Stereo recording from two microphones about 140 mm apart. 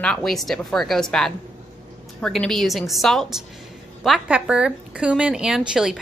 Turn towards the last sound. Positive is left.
turn(degrees=-5)  # may be behind; listen again after turning